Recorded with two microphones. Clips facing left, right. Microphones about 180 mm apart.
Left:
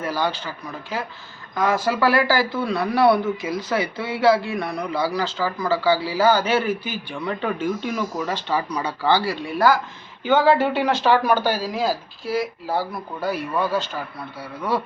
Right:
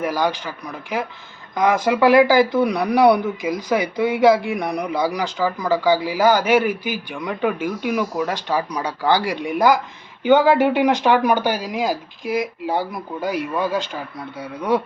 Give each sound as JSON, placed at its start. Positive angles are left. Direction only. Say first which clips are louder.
{"t": 0.0, "sound": "speech", "louder": "right 3 dB", "side_deg": -15}